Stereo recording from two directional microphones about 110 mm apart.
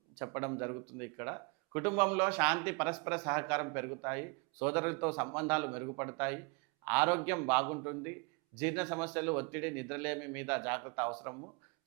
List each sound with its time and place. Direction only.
0.2 s speech: 20° right (ahead or behind)